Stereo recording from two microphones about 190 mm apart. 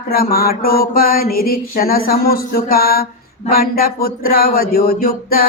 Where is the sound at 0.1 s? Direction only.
50° left (ahead or behind).